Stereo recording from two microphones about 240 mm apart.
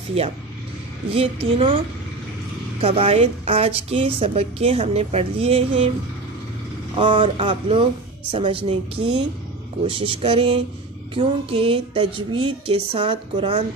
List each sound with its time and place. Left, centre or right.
0.2 s a woman's voice: right
2.8 s a woman's voice: right
7.0 s a woman's voice: right